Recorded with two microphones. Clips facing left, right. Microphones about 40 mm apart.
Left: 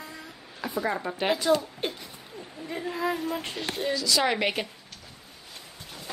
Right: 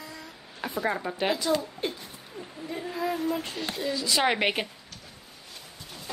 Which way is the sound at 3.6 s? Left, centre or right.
Left.